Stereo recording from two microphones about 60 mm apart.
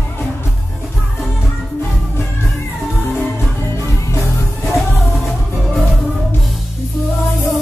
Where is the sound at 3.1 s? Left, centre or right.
Left.